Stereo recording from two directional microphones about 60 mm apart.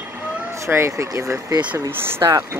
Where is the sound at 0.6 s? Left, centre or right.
Right.